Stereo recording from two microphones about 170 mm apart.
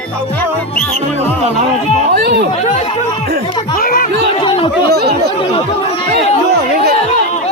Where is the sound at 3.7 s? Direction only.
55° left (ahead or behind).